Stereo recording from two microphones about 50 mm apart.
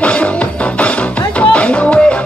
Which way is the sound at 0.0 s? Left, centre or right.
Left.